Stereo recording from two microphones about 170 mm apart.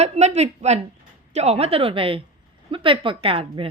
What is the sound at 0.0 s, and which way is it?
Speech, 40° right (ahead or behind).